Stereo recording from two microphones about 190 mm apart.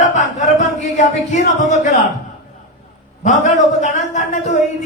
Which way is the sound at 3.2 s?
40° left (ahead or behind).